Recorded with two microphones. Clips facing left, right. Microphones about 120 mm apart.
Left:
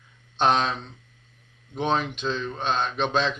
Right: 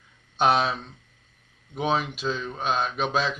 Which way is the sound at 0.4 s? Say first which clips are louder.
Even; 5° right (ahead or behind).